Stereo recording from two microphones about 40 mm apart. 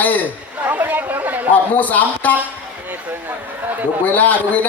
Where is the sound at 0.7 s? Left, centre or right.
Right.